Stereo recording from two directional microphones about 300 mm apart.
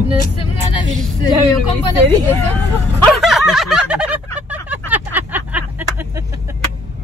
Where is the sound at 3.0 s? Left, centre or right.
Centre.